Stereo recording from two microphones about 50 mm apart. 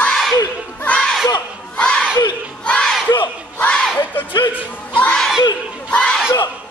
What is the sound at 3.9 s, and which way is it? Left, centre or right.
Music, left.